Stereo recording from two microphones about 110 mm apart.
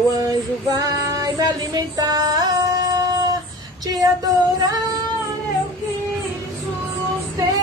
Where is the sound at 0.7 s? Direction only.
35° right (ahead or behind).